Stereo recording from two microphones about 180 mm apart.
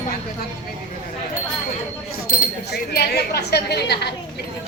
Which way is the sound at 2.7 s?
65° left (ahead or behind).